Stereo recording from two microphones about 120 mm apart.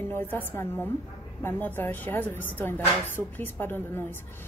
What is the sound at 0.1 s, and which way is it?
A woman's voice, 15° left (ahead or behind).